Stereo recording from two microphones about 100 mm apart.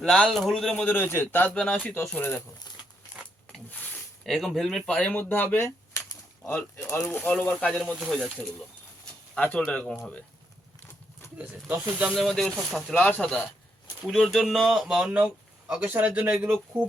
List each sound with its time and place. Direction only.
0.0 s speech: 5° left (ahead or behind)
0.9 s a man's voice: 20° left (ahead or behind)
1.5 s speech: 10° left (ahead or behind)
2.0 s a man's voice: 20° left (ahead or behind)
3.5 s a sound: 15° left (ahead or behind)
4.3 s speech: 5° left (ahead or behind)
5.0 s speech: 20° left (ahead or behind); by 8.4 s centre (ahead or behind)
9.3 s speech: 15° left (ahead or behind)
11.3 s speech: 10° right (ahead or behind)
12.1 s speech: centre (ahead or behind)
12.9 s speech: 15° left (ahead or behind)
14.0 s speech: centre (ahead or behind)